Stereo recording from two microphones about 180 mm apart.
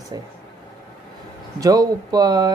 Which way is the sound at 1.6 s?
20° right (ahead or behind).